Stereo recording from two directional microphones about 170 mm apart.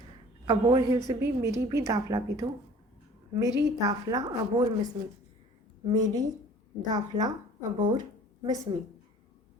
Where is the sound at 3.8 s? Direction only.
20° right (ahead or behind).